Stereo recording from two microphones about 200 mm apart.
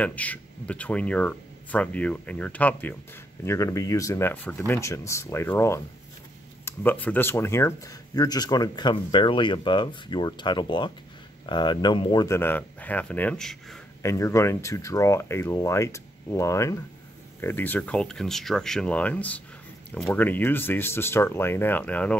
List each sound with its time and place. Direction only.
0.0 s speech: 5° left (ahead or behind)
14.0 s speech: 15° left (ahead or behind)